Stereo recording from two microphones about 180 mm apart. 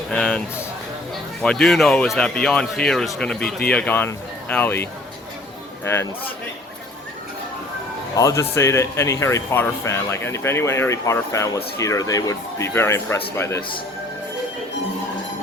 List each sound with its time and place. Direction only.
0.1 s a sound: 5° left (ahead or behind)
1.4 s speech: 5° left (ahead or behind)
8.1 s speech: 15° left (ahead or behind)